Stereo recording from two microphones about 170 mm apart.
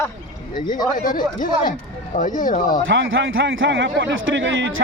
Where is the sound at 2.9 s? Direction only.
90° right.